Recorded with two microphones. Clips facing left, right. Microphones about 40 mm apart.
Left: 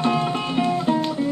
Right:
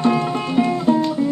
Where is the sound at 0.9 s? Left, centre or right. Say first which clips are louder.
Right 6 dB; left.